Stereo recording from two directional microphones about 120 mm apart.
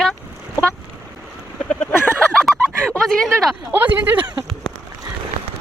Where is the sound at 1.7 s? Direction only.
10° left (ahead or behind).